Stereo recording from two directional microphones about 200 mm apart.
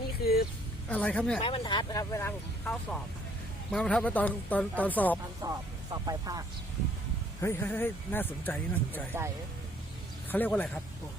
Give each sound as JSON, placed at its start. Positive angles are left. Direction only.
{"t": 0.2, "sound": "a sound", "side_deg": 50}
{"t": 0.9, "sound": "speech", "side_deg": 10}
{"t": 1.4, "sound": "speech", "side_deg": 25}
{"t": 5.4, "sound": "speech", "side_deg": -20}
{"t": 7.4, "sound": "speech", "side_deg": 10}
{"t": 10.3, "sound": "speech", "side_deg": 10}